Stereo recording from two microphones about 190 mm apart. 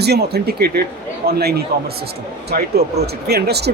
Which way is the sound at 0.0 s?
60° right (ahead or behind).